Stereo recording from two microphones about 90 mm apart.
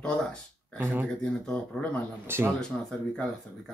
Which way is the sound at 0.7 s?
25° right (ahead or behind).